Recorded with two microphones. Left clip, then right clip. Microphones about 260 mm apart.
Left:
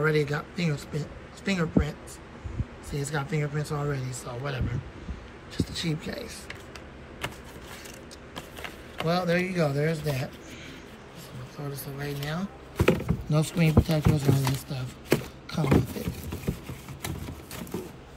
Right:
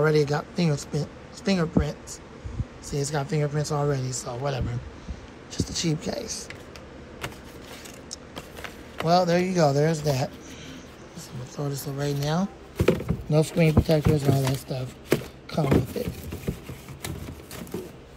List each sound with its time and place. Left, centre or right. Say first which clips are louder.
0.0 s speech: right 4 dB; centre
2.9 s speech: right 4 dB; centre
8.4 s a sound: left 1 dB; right
9.0 s speech: right 5 dB; centre
11.5 s speech: right 6 dB; centre
12.7 s a sound: right 1 dB; centre